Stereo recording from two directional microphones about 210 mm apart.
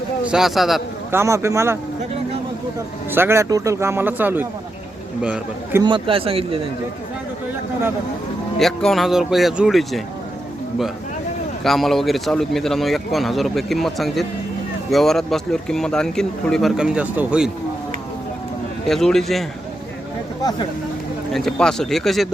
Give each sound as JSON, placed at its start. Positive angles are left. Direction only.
{"t": 0.3, "sound": "speech", "side_deg": 0}
{"t": 1.1, "sound": "speech", "side_deg": -15}
{"t": 3.1, "sound": "speech", "side_deg": -10}
{"t": 5.8, "sound": "speech", "side_deg": -25}
{"t": 8.5, "sound": "speech", "side_deg": 0}
{"t": 11.6, "sound": "speech", "side_deg": 0}
{"t": 18.9, "sound": "speech", "side_deg": 0}
{"t": 21.3, "sound": "speech", "side_deg": 0}